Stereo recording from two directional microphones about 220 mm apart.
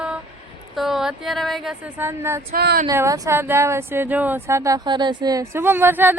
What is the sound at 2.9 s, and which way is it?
Speech, 15° right (ahead or behind).